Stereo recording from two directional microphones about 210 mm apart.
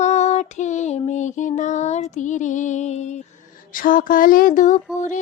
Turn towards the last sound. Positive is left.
turn(degrees=35)  # may be behind; listen again after turning